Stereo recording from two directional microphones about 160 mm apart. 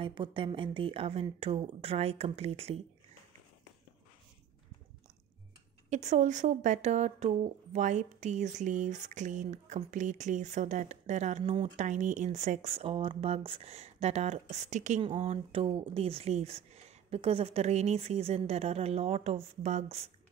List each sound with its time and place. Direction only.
0.0 s speech: 30° right (ahead or behind)
5.9 s speech: 45° right (ahead or behind)
15.0 s speech: 40° right (ahead or behind)